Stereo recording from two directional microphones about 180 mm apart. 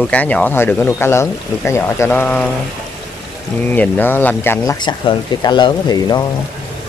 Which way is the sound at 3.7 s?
10° left (ahead or behind).